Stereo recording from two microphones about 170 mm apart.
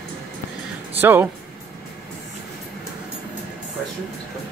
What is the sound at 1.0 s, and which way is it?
Speech, 10° right (ahead or behind).